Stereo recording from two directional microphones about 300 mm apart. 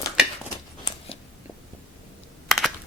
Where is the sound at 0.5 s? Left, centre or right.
Centre.